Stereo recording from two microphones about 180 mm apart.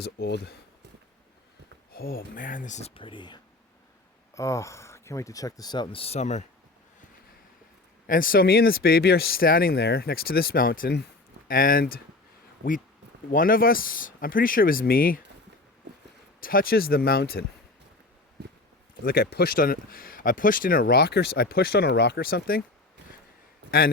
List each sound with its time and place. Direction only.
0.0 s speech: 65° left (ahead or behind)
1.9 s speech: 55° left (ahead or behind); by 6.4 s 40° left (ahead or behind)
8.0 s speech: 50° left (ahead or behind)
13.3 s speech: 50° left (ahead or behind)
16.4 s speech: 55° left (ahead or behind)
19.0 s speech: 60° left (ahead or behind)